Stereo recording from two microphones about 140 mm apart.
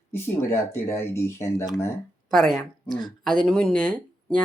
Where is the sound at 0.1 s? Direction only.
15° left (ahead or behind).